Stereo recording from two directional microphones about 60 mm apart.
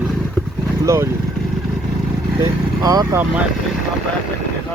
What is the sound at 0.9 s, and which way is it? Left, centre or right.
Speech, right.